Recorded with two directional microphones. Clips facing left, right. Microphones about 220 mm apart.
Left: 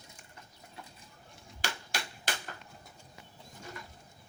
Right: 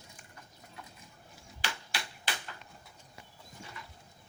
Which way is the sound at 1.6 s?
45° left (ahead or behind).